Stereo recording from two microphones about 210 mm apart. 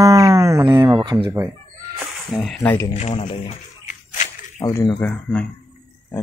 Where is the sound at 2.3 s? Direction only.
Centre (ahead or behind).